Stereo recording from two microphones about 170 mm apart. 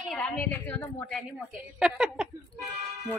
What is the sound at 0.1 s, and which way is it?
A woman's voice, 5° left (ahead or behind).